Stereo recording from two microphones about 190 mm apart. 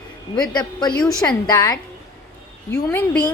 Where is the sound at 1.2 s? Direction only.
10° left (ahead or behind).